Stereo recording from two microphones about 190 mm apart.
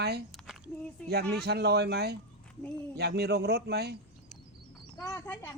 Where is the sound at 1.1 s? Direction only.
55° right (ahead or behind).